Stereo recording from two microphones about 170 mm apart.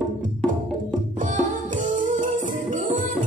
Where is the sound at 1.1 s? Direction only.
50° right (ahead or behind).